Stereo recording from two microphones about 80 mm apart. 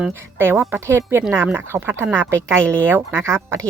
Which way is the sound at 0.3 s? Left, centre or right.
Right.